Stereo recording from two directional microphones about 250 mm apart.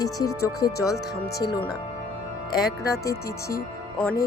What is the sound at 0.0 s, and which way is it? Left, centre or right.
Speech, centre.